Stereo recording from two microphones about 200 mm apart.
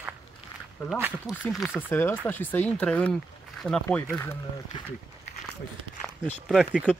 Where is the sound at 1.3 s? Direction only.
Centre (ahead or behind).